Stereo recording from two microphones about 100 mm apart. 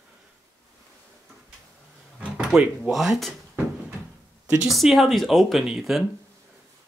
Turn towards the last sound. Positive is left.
turn(degrees=-5)  # may be behind; listen again after turning